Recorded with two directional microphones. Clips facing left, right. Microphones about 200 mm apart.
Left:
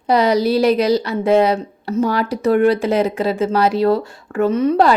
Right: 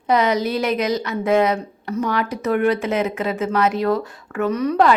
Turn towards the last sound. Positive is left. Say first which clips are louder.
# left 3 dB
turn(degrees=30)  # may be behind; listen again after turning